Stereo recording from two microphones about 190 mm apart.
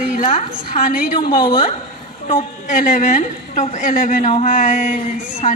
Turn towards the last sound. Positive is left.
turn(degrees=40)  # may be behind; listen again after turning